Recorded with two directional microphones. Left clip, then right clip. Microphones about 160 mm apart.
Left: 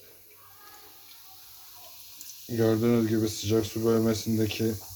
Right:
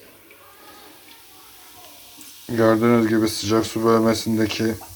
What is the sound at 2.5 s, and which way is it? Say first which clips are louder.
Speech: right 8 dB; centre (ahead or behind).